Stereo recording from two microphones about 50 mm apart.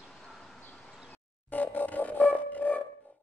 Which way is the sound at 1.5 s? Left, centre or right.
Left.